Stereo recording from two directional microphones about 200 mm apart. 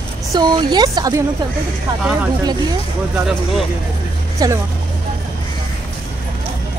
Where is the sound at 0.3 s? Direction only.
20° right (ahead or behind).